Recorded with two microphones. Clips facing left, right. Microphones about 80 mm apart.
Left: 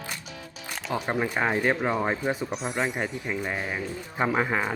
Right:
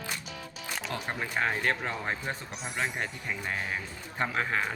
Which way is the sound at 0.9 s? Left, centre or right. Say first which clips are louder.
Left 8 dB; centre.